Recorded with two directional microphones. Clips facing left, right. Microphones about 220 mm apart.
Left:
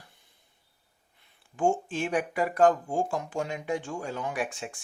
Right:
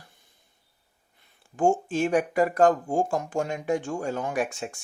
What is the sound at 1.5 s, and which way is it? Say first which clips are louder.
Speech: right 4 dB; 45° right (ahead or behind).